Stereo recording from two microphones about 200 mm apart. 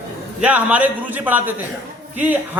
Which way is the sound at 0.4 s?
5° right (ahead or behind).